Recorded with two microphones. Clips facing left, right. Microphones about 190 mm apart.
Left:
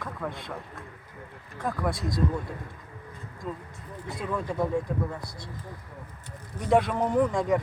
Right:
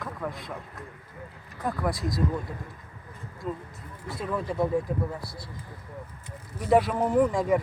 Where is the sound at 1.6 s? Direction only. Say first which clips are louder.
Right 1 dB; centre (ahead or behind).